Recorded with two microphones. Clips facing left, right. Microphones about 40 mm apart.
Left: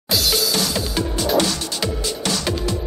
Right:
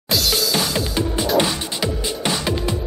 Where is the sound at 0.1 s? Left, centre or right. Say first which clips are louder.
Even; centre.